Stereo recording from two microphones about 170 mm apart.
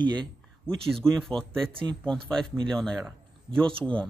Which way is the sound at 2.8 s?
Centre (ahead or behind).